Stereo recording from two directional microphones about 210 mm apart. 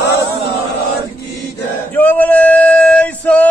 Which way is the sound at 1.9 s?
10° left (ahead or behind).